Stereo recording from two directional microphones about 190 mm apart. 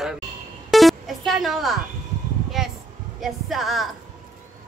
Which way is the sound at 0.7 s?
Centre (ahead or behind).